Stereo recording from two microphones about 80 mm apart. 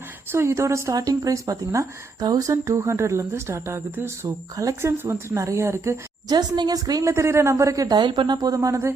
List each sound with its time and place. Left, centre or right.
0.3 s speech: right
2.6 s speech: right
6.2 s speech: right
7.1 s speech: right
7.9 s speech: right